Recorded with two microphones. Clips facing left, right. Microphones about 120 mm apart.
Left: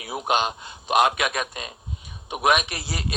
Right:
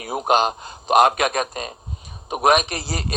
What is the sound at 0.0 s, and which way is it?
A man's voice, 45° right (ahead or behind).